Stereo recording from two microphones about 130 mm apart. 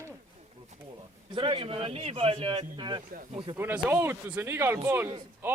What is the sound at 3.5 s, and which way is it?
A man's voice, 15° right (ahead or behind).